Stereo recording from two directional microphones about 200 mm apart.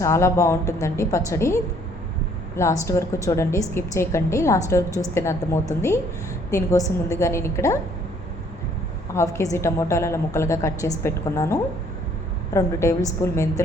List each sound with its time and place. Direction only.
0.0 s a woman's voice: 15° left (ahead or behind)
2.6 s a woman's voice: 15° left (ahead or behind)
9.1 s a woman's voice: 15° left (ahead or behind)